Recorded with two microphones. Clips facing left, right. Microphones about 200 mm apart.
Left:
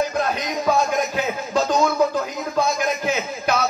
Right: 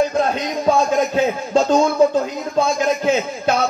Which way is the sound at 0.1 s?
30° right (ahead or behind).